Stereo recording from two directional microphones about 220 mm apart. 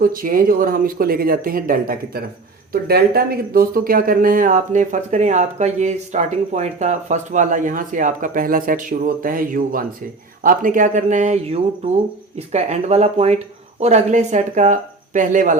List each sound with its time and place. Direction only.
0.0 s speech: 40° right (ahead or behind)